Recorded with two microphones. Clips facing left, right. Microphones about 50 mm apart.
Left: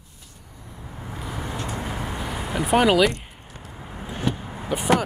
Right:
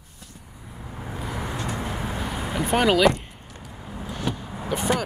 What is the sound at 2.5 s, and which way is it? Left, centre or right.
Speech, centre.